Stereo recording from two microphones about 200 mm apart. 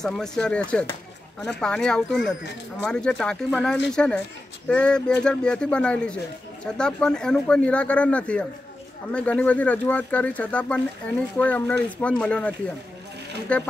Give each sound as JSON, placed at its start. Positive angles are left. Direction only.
{"t": 0.0, "sound": "speech", "side_deg": 5}